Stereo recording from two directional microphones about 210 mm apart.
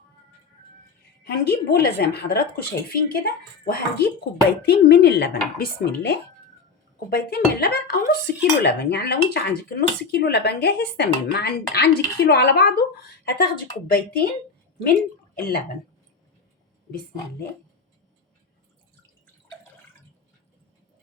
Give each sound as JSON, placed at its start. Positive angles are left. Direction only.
{"t": 1.2, "sound": "cutlery", "side_deg": 50}